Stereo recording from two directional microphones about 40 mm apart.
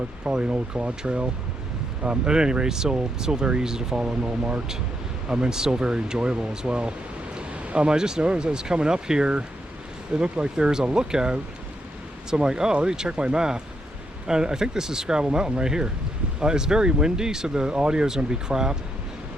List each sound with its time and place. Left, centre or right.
0.3 s speech: right
7.6 s a sound: right
7.9 s speech: centre